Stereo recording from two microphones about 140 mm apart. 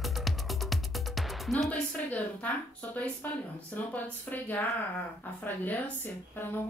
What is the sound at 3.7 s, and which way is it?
Speech, 10° left (ahead or behind).